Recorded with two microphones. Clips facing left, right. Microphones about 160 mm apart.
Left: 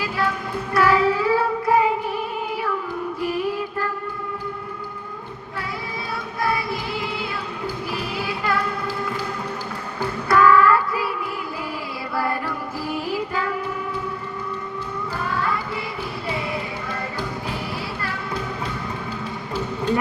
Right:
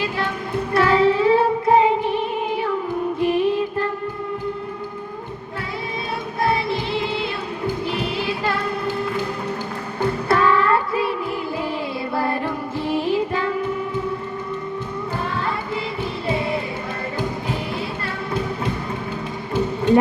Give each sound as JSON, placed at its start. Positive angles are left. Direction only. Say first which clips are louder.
{"t": 0.0, "sound": "music", "louder": "even", "side_deg": -25}
{"t": 6.4, "sound": "music", "louder": "right 3 dB", "side_deg": -25}
{"t": 10.2, "sound": "child singing", "louder": "left 3 dB", "side_deg": -25}
{"t": 12.1, "sound": "music", "louder": "right 1 dB", "side_deg": -25}
{"t": 15.2, "sound": "music", "louder": "left 3 dB", "side_deg": -25}
{"t": 18.0, "sound": "music", "louder": "right 3 dB", "side_deg": -25}